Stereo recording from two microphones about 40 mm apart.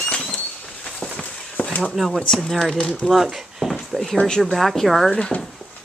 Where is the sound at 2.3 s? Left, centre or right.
Centre.